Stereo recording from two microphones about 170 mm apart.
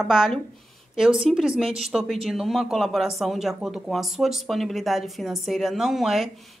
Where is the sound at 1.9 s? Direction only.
Centre (ahead or behind).